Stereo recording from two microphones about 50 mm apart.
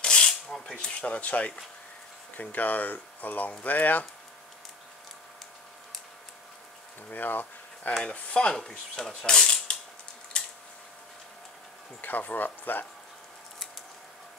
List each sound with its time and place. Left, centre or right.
0.0 s filing: centre
0.7 s speech: left
2.5 s speech: left
7.1 s speech: left
8.0 s speech: left
8.5 s speech: centre
9.1 s speech: centre
9.4 s cutlery: centre
10.3 s a sound: left
12.0 s speech: left